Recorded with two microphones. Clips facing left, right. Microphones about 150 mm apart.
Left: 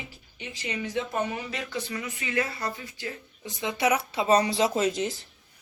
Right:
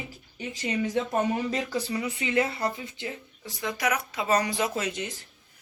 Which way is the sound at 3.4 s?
25° left (ahead or behind).